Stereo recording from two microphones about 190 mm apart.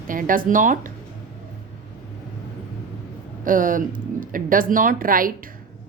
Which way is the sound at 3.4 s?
45° right (ahead or behind).